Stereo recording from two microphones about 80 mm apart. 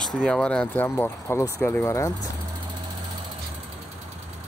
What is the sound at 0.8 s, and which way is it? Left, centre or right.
Speech, left.